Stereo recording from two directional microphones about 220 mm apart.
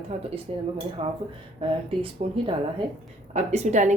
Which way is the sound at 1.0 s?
25° right (ahead or behind).